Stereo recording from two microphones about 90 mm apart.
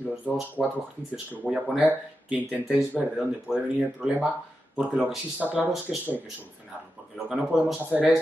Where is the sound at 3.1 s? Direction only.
10° right (ahead or behind).